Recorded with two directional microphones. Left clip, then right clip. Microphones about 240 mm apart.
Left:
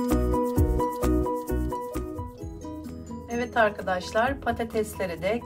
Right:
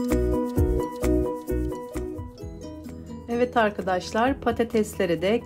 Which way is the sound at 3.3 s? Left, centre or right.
Right.